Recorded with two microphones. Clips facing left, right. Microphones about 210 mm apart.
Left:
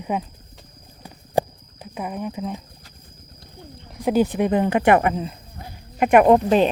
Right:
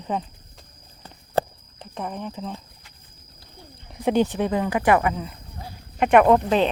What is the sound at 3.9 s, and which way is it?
Speech, centre (ahead or behind).